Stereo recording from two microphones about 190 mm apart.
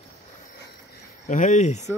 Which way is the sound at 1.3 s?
40° left (ahead or behind).